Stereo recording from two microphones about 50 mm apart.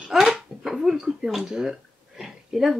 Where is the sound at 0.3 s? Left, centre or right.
Centre.